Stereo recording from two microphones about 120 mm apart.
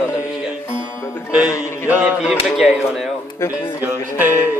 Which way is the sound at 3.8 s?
15° right (ahead or behind).